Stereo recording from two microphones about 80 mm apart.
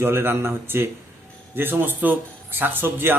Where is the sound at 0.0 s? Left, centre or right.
Right.